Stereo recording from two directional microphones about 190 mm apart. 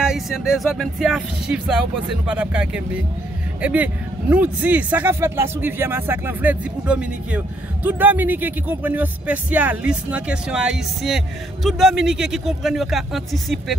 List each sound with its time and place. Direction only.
0.0 s speech: 5° right (ahead or behind)